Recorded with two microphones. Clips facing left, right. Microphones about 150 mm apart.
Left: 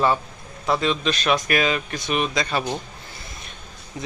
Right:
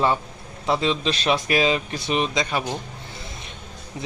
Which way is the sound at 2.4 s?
15° right (ahead or behind).